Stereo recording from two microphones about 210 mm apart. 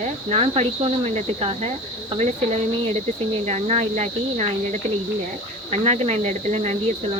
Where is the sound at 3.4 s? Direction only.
30° right (ahead or behind).